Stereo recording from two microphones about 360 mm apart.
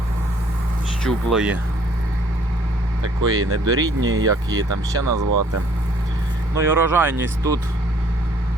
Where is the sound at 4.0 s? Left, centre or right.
Right.